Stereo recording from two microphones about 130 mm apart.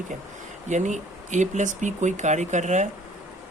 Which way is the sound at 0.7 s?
70° right (ahead or behind).